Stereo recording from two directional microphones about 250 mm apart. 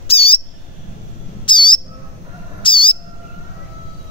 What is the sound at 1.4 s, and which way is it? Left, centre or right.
Bird, centre.